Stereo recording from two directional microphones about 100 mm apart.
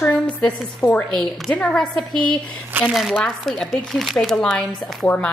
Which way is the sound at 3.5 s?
5° left (ahead or behind).